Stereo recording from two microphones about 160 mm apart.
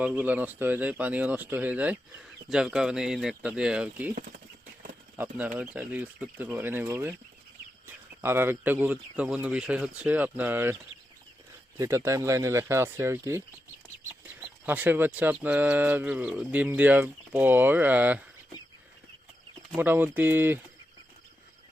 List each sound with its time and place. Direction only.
0.0 s speech: 10° right (ahead or behind)
5.1 s speech: 10° right (ahead or behind)
11.8 s speech: 20° right (ahead or behind)
14.7 s speech: 10° right (ahead or behind)
19.7 s speech: 15° right (ahead or behind)